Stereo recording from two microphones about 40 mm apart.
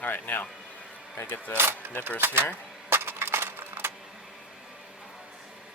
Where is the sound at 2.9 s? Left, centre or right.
Right.